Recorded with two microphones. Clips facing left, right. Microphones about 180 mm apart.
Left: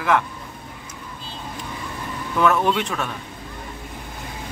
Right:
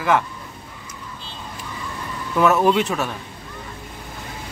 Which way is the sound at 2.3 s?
5° right (ahead or behind).